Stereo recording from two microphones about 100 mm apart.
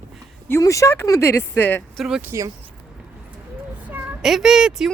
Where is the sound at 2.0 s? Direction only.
5° right (ahead or behind).